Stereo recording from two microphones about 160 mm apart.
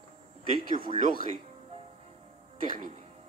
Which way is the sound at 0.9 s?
45° right (ahead or behind).